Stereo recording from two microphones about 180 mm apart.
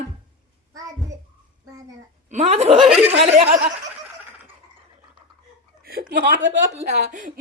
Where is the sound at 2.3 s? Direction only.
40° right (ahead or behind).